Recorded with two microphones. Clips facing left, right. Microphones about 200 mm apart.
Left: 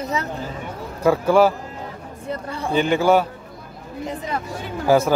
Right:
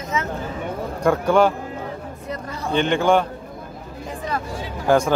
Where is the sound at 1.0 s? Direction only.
5° left (ahead or behind).